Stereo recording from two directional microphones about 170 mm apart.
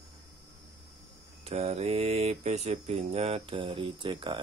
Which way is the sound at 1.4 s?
40° right (ahead or behind).